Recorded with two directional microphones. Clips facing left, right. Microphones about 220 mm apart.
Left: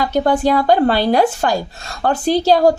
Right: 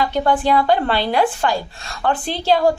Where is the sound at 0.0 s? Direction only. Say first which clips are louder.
Left 3 dB; 40° left (ahead or behind).